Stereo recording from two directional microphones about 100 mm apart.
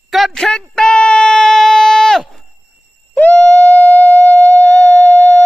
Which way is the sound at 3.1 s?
20° left (ahead or behind).